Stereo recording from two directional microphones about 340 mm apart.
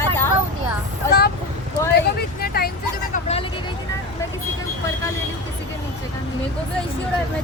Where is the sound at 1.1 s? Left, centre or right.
Left.